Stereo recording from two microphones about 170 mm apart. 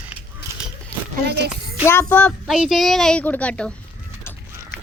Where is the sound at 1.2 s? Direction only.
75° right (ahead or behind).